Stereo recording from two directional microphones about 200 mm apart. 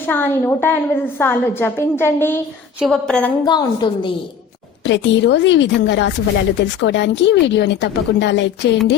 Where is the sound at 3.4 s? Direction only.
20° left (ahead or behind).